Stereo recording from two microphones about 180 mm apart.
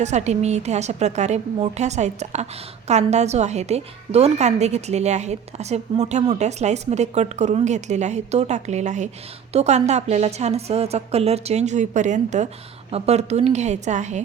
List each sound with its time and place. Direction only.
0.0 s a woman's voice: 40° right (ahead or behind)